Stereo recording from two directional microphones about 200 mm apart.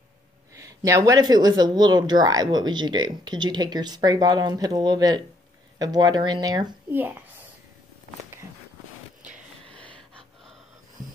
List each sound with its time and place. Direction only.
0.6 s speech: 15° right (ahead or behind)
9.7 s gasp: 5° left (ahead or behind)